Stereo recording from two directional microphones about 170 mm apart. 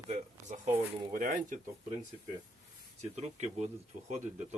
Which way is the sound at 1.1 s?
50° right (ahead or behind).